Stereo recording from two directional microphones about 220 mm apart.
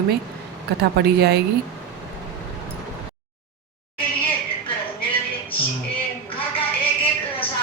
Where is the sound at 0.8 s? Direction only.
45° right (ahead or behind).